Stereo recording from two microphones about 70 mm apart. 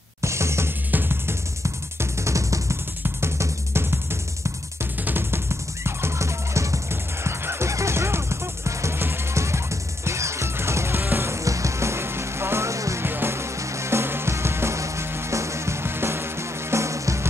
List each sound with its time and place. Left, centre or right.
0.2 s music: right
1.6 s music: right
13.0 s music: right